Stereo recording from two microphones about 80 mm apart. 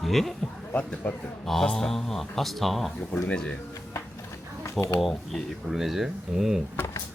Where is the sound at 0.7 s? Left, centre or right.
Centre.